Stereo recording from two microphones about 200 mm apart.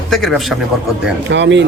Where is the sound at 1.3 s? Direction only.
60° right (ahead or behind).